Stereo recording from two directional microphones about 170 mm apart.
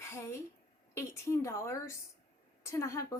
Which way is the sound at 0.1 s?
15° left (ahead or behind).